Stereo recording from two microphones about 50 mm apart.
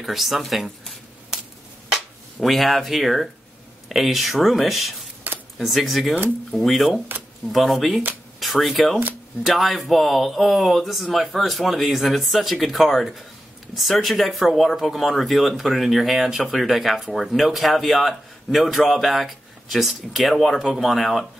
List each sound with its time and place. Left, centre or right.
0.0 s speech: centre
2.4 s speech: centre
5.3 s a sound: right
5.6 s speech: centre